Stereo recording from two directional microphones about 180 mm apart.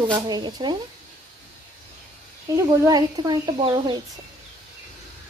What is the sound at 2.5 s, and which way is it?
Speech, 20° right (ahead or behind).